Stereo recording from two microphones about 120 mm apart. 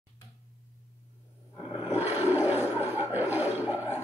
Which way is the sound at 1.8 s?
15° right (ahead or behind).